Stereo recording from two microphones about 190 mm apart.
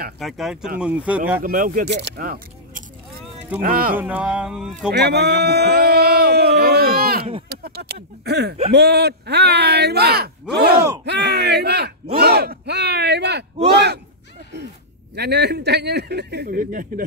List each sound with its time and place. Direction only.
0.2 s speech: centre (ahead or behind)
1.4 s speech: 50° right (ahead or behind)
1.9 s speech: 65° right (ahead or behind)
3.9 s speech: 10° right (ahead or behind)
4.9 s a sound: 60° right (ahead or behind)
8.7 s speech: 60° right (ahead or behind)
15.1 s speech: 60° right (ahead or behind)